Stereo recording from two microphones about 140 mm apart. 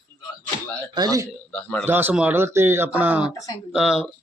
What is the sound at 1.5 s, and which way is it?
Speech, 10° left (ahead or behind).